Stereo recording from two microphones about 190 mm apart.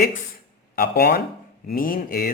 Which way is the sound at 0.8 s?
55° left (ahead or behind).